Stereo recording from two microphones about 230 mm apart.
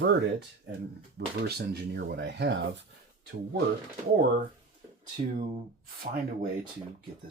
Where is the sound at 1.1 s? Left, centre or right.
Right.